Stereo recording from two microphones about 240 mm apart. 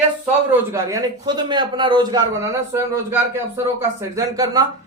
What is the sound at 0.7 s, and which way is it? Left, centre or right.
A man's voice, centre.